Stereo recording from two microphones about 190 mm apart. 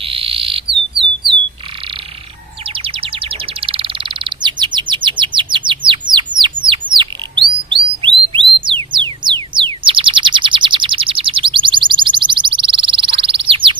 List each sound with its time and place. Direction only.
0.0 s frog: 30° right (ahead or behind)
2.7 s bird: 30° right (ahead or behind)
8.3 s music: 25° right (ahead or behind)